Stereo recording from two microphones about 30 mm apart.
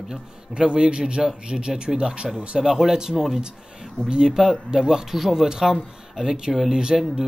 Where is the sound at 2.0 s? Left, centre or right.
Right.